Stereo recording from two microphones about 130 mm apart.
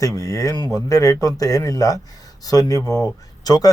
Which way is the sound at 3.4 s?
30° left (ahead or behind).